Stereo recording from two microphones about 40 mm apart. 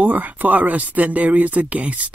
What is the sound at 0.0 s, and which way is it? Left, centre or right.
Speech, right.